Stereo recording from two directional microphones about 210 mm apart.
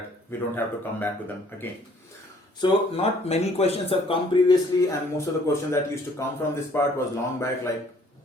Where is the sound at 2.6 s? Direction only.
30° left (ahead or behind).